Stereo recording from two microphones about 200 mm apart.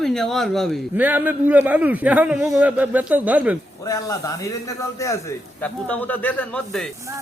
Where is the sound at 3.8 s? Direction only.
15° left (ahead or behind).